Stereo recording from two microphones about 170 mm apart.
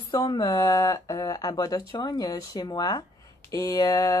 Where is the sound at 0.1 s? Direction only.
25° left (ahead or behind).